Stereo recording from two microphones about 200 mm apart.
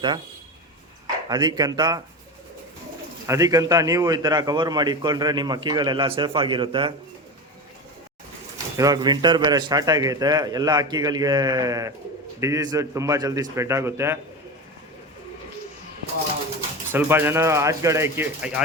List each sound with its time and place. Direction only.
1.3 s a man's voice: 20° right (ahead or behind)
3.2 s a man's voice: 15° right (ahead or behind)
8.5 s a man's voice: 20° right (ahead or behind)
16.9 s a man's voice: 10° right (ahead or behind)